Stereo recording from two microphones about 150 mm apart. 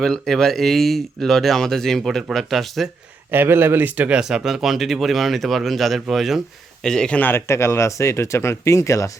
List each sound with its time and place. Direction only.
0.0 s speech: 5° left (ahead or behind)
3.3 s speech: 15° right (ahead or behind); by 9.1 s 20° left (ahead or behind)